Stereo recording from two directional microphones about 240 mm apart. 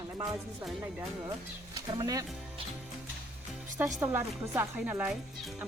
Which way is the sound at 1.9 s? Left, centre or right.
Centre.